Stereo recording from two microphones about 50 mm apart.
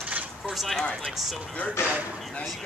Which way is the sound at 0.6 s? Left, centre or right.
Centre.